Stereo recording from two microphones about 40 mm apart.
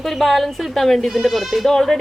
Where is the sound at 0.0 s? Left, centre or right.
Centre.